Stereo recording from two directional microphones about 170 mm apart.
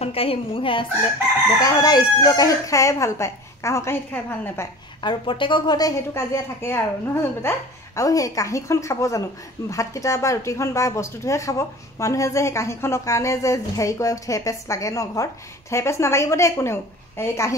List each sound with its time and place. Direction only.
0.0 s a woman's voice: 35° left (ahead or behind); by 4.6 s 15° left (ahead or behind)
5.0 s speech: 30° left (ahead or behind)